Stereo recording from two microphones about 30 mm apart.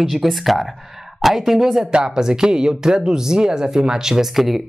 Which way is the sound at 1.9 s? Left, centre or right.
Right.